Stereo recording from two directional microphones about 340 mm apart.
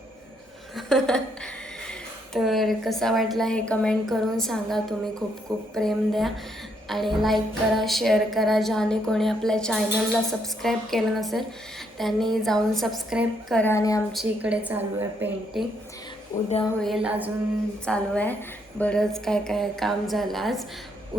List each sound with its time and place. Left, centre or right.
0.8 s a woman's voice: centre
16.3 s speech: left
16.8 s a woman's voice: centre